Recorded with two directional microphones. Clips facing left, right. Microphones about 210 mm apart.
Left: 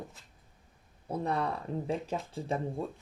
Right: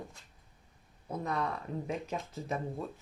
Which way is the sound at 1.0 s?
30° left (ahead or behind).